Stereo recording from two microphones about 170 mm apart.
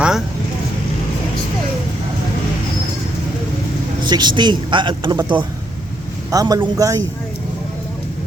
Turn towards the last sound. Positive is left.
turn(degrees=-20)  # may be behind; listen again after turning